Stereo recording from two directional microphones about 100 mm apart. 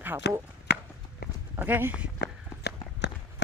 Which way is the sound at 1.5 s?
20° right (ahead or behind).